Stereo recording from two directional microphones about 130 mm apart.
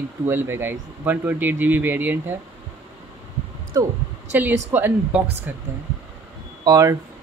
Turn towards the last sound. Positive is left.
turn(degrees=-30)  # may be behind; listen again after turning